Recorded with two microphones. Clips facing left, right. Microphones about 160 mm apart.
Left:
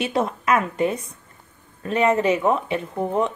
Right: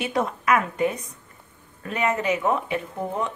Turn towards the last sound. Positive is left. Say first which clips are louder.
# left 5 dB
turn(degrees=20)  # may be behind; listen again after turning